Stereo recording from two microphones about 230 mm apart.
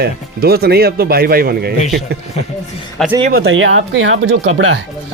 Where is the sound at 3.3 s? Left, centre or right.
Right.